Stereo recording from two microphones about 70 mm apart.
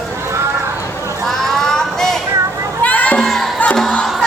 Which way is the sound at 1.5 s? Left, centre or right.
Centre.